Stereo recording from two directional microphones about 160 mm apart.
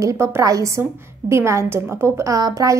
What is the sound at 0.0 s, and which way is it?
A woman's voice, 20° right (ahead or behind).